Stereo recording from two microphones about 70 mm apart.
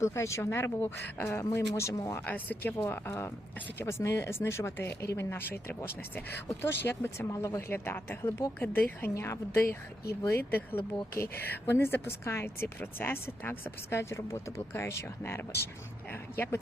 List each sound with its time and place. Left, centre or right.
0.0 s a woman's voice: left
2.2 s a woman's voice: left
7.3 s speech: left
7.7 s a woman's voice: left
11.1 s a woman's voice: left